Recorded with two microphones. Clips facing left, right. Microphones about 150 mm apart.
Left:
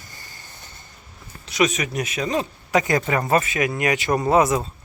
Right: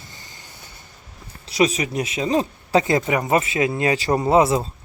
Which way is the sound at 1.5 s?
30° right (ahead or behind).